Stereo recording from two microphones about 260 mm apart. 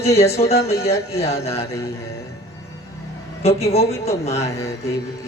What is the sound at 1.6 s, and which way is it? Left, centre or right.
Speech, centre.